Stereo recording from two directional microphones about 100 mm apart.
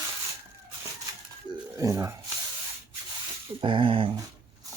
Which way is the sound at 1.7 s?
35° right (ahead or behind).